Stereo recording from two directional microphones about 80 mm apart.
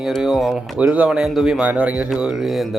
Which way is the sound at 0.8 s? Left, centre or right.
Centre.